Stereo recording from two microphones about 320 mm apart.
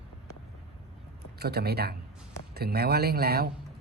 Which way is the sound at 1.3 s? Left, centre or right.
Right.